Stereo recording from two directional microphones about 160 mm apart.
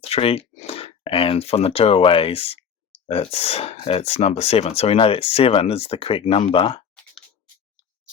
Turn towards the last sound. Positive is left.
turn(degrees=35)  # may be behind; listen again after turning